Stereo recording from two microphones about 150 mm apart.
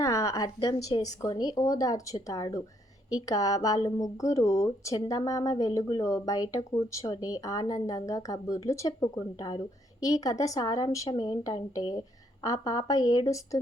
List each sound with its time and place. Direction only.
0.0 s speech: 20° left (ahead or behind)